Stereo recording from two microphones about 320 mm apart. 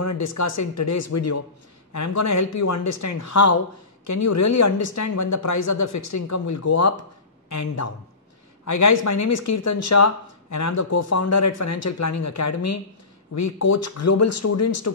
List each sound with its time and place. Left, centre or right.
0.0 s speech: left